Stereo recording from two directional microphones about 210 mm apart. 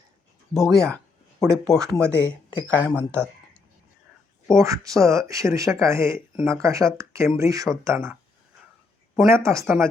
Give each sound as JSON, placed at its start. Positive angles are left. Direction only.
{"t": 0.5, "sound": "speech", "side_deg": 0}
{"t": 2.9, "sound": "speech", "side_deg": -10}
{"t": 4.5, "sound": "speech", "side_deg": -15}
{"t": 6.3, "sound": "speech", "side_deg": -5}
{"t": 6.6, "sound": "speech", "side_deg": -15}
{"t": 9.3, "sound": "speech", "side_deg": -15}